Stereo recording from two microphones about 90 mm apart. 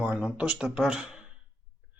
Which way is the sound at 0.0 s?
20° right (ahead or behind).